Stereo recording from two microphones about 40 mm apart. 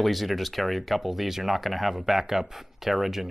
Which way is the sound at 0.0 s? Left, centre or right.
Centre.